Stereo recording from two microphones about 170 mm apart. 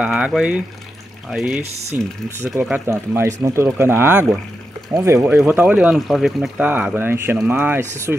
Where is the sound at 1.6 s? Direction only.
40° right (ahead or behind).